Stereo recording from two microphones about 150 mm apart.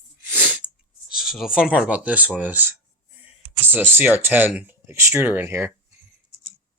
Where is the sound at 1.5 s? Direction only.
5° right (ahead or behind).